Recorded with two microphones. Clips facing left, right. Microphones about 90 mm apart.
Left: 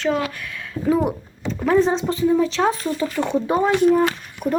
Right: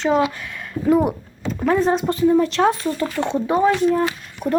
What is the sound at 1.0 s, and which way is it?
Speech, 5° right (ahead or behind).